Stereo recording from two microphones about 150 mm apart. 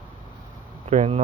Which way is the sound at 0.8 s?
45° right (ahead or behind).